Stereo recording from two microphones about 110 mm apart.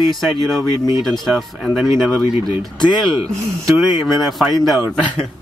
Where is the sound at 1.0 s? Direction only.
Centre (ahead or behind).